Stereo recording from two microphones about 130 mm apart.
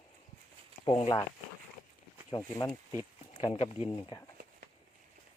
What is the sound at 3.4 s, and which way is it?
Speech, 45° left (ahead or behind).